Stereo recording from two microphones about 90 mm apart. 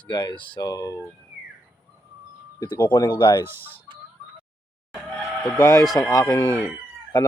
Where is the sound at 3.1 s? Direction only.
65° left (ahead or behind).